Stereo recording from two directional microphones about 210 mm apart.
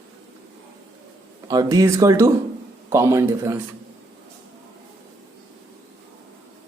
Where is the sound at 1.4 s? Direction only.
15° right (ahead or behind).